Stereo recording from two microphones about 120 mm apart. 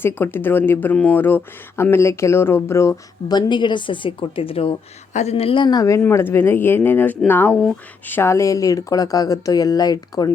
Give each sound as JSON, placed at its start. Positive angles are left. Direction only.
{"t": 0.0, "sound": "speech", "side_deg": 15}
{"t": 3.3, "sound": "speech", "side_deg": 40}
{"t": 5.1, "sound": "speech", "side_deg": 65}
{"t": 6.0, "sound": "speech", "side_deg": 20}